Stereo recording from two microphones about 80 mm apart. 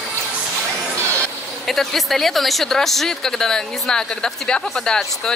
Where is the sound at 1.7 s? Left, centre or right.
Centre.